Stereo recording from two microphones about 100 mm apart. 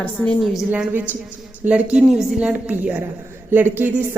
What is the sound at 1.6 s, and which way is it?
A woman's voice, 10° right (ahead or behind).